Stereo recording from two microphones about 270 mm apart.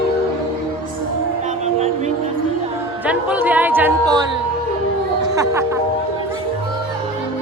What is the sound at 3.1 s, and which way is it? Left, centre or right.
Speech, centre.